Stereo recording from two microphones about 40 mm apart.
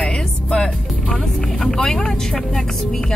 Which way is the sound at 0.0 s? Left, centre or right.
Left.